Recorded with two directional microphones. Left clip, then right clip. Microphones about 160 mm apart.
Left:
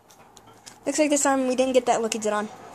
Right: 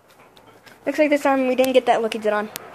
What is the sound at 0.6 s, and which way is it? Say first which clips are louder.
A woman's voice: right 4 dB; centre (ahead or behind).